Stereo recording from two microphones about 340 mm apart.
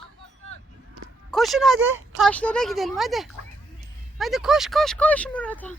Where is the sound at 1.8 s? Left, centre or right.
Right.